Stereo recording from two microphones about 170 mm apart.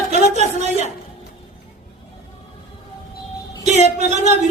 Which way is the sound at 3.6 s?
40° right (ahead or behind).